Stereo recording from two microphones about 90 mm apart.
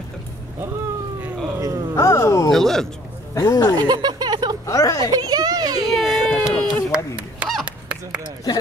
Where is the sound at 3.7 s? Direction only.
50° right (ahead or behind).